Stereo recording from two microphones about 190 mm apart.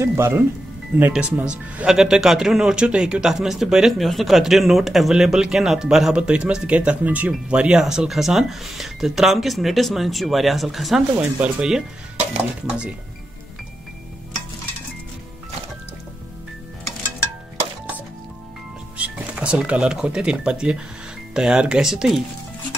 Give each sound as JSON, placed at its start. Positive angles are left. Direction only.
{"t": 0.0, "sound": "speech", "side_deg": -15}
{"t": 18.9, "sound": "speech", "side_deg": -5}